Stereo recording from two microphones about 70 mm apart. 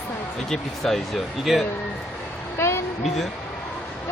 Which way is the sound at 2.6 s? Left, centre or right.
Left.